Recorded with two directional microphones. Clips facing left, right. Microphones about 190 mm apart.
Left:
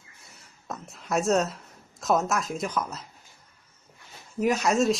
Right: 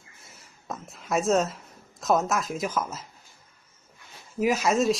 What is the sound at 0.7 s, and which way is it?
A woman's voice, centre (ahead or behind).